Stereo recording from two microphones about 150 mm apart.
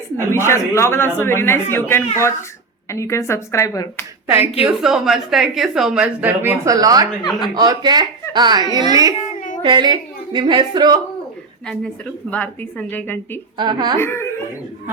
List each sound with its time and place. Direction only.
0.3 s a woman's voice: 15° left (ahead or behind)
4.6 s a woman's voice: 5° right (ahead or behind); by 11.0 s 30° right (ahead or behind)
11.7 s a woman's voice: 10° left (ahead or behind)
13.6 s speech: 30° right (ahead or behind)
14.0 s a woman's voice: 15° left (ahead or behind)